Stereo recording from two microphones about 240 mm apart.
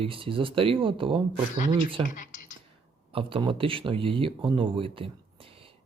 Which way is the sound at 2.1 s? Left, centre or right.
Left.